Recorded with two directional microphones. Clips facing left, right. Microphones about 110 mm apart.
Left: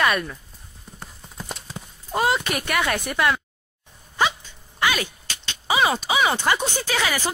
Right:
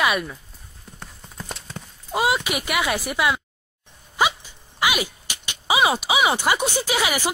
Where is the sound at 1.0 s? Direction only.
5° left (ahead or behind).